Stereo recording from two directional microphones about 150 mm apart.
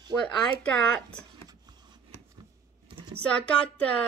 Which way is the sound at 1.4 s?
30° right (ahead or behind).